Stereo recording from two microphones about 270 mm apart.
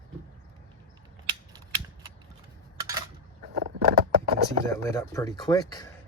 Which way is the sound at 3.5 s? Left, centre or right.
Right.